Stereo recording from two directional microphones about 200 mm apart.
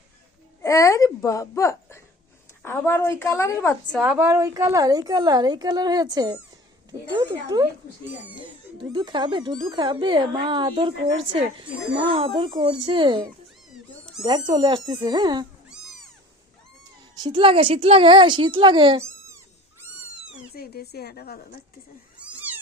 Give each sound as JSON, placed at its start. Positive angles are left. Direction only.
{"t": 0.6, "sound": "speech", "side_deg": 15}
{"t": 3.9, "sound": "a woman's voice", "side_deg": -5}
{"t": 7.4, "sound": "speech", "side_deg": -15}
{"t": 8.8, "sound": "a woman's voice", "side_deg": -20}
{"t": 13.7, "sound": "cat", "side_deg": 0}
{"t": 14.3, "sound": "a woman's voice", "side_deg": -20}
{"t": 17.2, "sound": "a woman's voice", "side_deg": -25}
{"t": 20.6, "sound": "a woman's voice", "side_deg": 50}
{"t": 22.2, "sound": "cat", "side_deg": -10}